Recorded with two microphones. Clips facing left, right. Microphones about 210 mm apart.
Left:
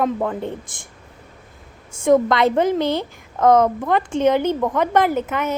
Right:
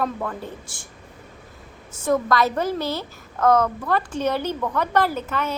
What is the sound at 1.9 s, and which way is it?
A woman's voice, 25° left (ahead or behind).